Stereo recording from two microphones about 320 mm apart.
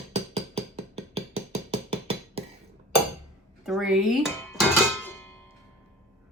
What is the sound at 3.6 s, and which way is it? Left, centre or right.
Dishes, centre.